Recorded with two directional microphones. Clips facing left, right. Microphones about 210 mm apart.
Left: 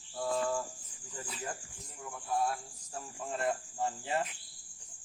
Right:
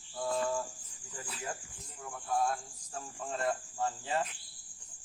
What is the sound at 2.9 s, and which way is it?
Speech, 15° left (ahead or behind).